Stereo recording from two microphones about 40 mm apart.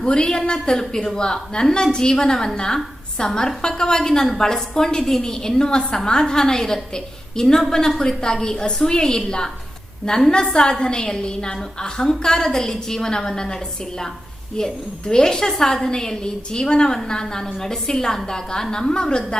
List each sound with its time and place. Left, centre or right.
0.0 s a woman's voice: centre